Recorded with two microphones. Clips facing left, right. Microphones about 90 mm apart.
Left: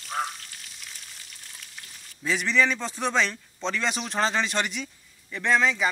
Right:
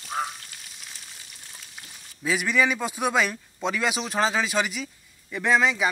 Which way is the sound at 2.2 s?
5° right (ahead or behind).